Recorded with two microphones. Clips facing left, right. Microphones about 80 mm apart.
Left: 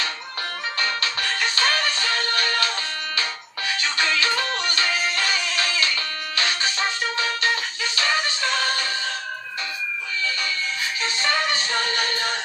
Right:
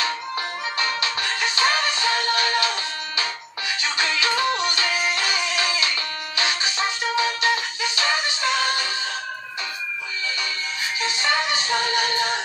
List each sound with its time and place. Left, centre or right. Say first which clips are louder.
0.7 s music: right 1 dB; centre
11.0 s music: right 1 dB; centre